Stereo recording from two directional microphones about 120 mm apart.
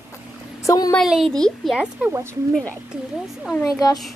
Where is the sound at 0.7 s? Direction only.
30° left (ahead or behind).